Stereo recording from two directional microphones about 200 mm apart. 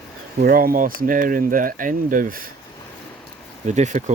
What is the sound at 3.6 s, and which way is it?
Speech, 35° right (ahead or behind).